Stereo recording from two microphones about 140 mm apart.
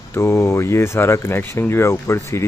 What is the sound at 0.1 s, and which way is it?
Speech, 20° left (ahead or behind).